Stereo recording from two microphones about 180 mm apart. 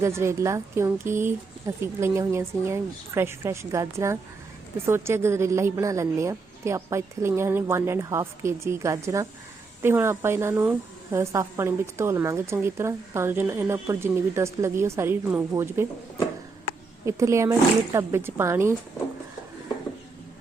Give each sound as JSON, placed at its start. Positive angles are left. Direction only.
{"t": 0.0, "sound": "a woman's voice", "side_deg": -15}